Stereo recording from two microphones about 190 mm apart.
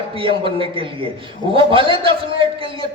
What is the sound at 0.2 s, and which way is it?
A man's voice, 25° right (ahead or behind).